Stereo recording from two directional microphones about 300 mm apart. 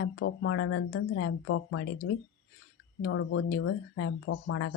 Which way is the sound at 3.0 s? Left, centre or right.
Left.